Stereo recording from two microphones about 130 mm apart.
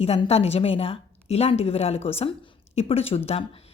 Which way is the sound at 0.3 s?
55° left (ahead or behind).